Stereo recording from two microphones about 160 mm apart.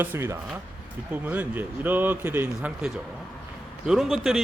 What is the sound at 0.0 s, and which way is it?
A man's voice, 15° right (ahead or behind).